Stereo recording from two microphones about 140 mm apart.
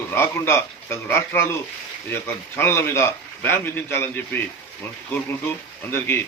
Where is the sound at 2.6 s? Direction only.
15° left (ahead or behind).